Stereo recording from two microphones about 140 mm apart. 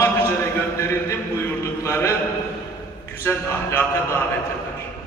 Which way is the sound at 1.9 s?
20° left (ahead or behind).